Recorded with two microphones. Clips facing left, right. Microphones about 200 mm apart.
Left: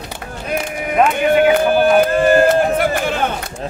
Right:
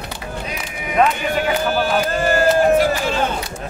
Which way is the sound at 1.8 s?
55° left (ahead or behind).